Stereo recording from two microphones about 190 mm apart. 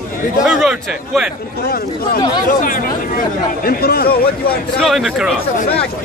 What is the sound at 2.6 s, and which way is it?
Speech, 45° left (ahead or behind).